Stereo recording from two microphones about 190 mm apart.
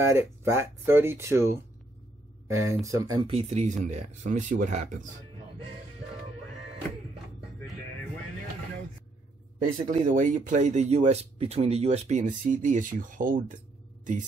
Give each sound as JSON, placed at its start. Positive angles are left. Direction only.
{"t": 0.0, "sound": "speech", "side_deg": -15}
{"t": 9.8, "sound": "speech", "side_deg": -45}